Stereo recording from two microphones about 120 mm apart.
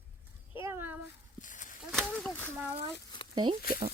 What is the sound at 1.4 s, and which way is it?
Walk, 90° left.